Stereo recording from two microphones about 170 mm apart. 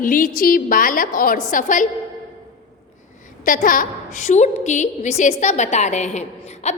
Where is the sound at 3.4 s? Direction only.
50° left (ahead or behind).